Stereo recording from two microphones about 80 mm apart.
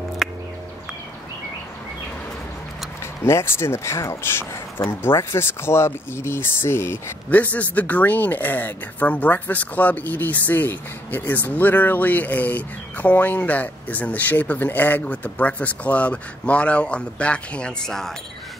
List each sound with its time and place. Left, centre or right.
3.3 s speech: left
7.2 s speech: centre